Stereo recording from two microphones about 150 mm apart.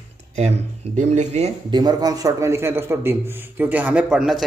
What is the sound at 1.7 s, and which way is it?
A man's voice, 25° right (ahead or behind).